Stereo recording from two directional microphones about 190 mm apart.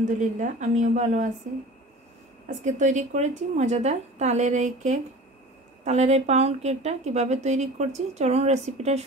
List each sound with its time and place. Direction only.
0.2 s a woman's voice: 40° right (ahead or behind)
2.4 s a woman's voice: 40° right (ahead or behind)